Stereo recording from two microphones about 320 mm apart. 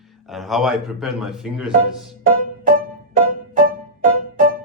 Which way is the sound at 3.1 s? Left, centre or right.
Right.